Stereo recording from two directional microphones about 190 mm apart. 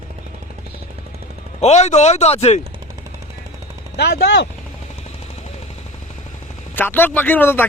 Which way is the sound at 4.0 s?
60° left (ahead or behind).